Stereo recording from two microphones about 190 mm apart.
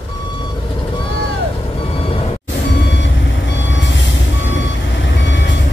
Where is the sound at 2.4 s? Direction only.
70° left (ahead or behind).